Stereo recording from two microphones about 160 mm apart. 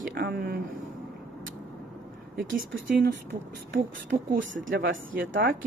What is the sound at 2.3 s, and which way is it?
Speech, 60° right (ahead or behind).